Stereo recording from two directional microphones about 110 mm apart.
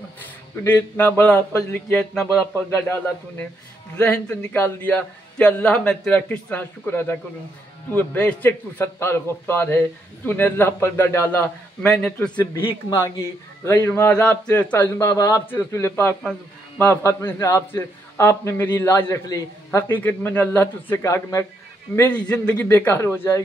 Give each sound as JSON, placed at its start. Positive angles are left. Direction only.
{"t": 0.7, "sound": "a man's voice", "side_deg": 20}
{"t": 11.8, "sound": "a man's voice", "side_deg": 10}
{"t": 12.5, "sound": "a man's voice", "side_deg": 25}
{"t": 14.1, "sound": "a man's voice", "side_deg": 10}
{"t": 15.0, "sound": "a man's voice", "side_deg": 30}
{"t": 19.2, "sound": "a man's voice", "side_deg": 30}
{"t": 19.9, "sound": "a man's voice", "side_deg": 20}
{"t": 21.9, "sound": "a man's voice", "side_deg": 15}